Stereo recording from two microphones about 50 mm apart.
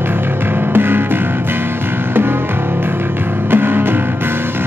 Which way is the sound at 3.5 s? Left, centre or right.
Right.